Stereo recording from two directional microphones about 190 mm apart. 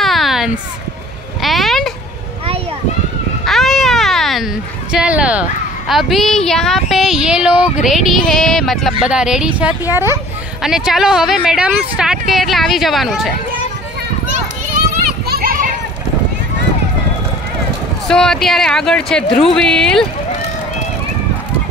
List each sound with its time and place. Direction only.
0.0 s a sound: centre (ahead or behind)
3.4 s baby cry: centre (ahead or behind)
4.9 s a woman's voice: 5° right (ahead or behind)
15.2 s children playing: 55° right (ahead or behind)
18.0 s a woman's voice: 5° left (ahead or behind)